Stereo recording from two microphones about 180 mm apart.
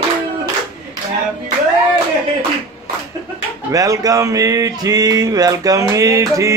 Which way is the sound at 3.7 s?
20° right (ahead or behind).